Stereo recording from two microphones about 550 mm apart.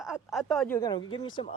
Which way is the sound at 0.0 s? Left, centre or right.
Centre.